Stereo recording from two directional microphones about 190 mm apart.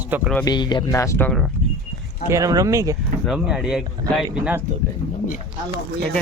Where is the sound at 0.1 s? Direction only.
10° right (ahead or behind).